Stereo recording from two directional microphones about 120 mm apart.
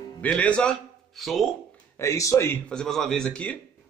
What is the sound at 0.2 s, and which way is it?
Speech, 10° left (ahead or behind).